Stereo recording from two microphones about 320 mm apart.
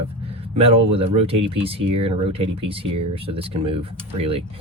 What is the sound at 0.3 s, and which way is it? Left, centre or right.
Speech, centre.